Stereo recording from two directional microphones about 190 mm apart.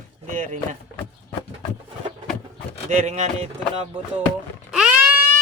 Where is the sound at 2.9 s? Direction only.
35° right (ahead or behind).